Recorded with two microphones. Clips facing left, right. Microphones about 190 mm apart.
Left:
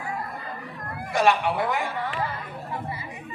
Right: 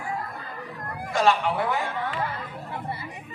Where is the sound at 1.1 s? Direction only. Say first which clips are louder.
Left 1 dB; 15° left (ahead or behind).